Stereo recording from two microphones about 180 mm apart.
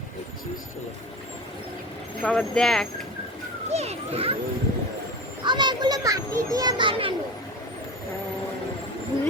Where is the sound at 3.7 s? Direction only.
35° right (ahead or behind).